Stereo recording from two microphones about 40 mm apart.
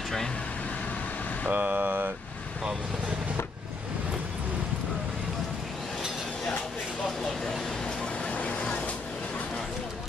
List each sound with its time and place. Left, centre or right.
1.5 s speech: right
8.3 s vehicle: left